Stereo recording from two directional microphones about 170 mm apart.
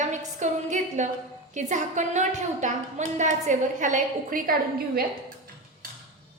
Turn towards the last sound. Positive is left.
turn(degrees=-60)  # may be behind; listen again after turning